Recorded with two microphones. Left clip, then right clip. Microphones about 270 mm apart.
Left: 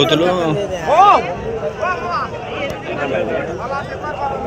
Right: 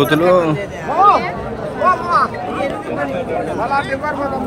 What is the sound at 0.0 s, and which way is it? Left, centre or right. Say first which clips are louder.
Speech: right 2 dB; centre.